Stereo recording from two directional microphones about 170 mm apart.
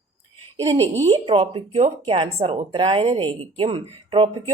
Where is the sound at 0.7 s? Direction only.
25° right (ahead or behind).